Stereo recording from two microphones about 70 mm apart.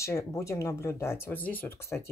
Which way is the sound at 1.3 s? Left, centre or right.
Left.